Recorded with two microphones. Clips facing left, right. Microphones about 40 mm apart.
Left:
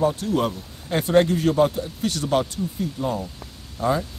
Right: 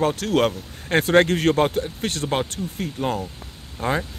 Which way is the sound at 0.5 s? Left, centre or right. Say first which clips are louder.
Right 3 dB; right.